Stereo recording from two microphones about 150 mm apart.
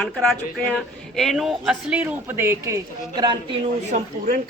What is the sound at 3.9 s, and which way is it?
Speech, 65° right (ahead or behind).